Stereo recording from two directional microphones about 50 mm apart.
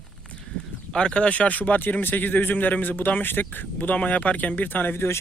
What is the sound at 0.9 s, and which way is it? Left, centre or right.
Speech, centre.